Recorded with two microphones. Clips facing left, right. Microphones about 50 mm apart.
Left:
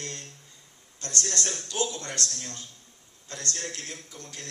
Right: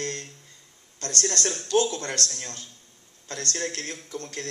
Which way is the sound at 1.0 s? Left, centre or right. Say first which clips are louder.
Right 4 dB; right.